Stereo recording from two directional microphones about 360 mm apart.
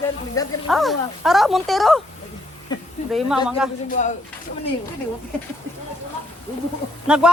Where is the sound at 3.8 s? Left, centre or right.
Left.